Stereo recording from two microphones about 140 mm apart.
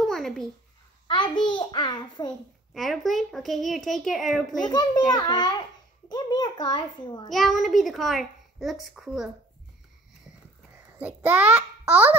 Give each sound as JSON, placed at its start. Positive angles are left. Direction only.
{"t": 0.0, "sound": "a sound", "side_deg": 0}
{"t": 1.0, "sound": "a child's voice", "side_deg": 35}
{"t": 2.7, "sound": "a child's voice", "side_deg": 0}
{"t": 4.6, "sound": "a child's voice", "side_deg": 30}
{"t": 7.2, "sound": "a child's voice", "side_deg": 0}
{"t": 11.0, "sound": "a child's voice", "side_deg": -10}